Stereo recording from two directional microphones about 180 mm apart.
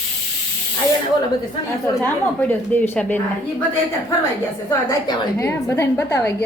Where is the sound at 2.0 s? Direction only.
10° left (ahead or behind).